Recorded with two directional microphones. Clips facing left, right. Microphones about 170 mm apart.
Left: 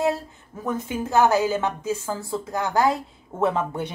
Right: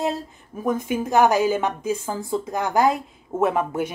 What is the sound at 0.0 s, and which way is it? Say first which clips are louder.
A woman's voice: left 2 dB; 15° right (ahead or behind).